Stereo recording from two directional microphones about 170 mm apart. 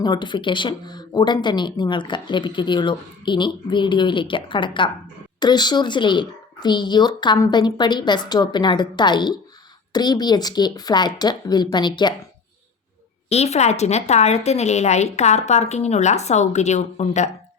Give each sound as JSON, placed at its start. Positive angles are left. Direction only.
{"t": 0.0, "sound": "speech", "side_deg": 25}
{"t": 13.3, "sound": "a woman's voice", "side_deg": 40}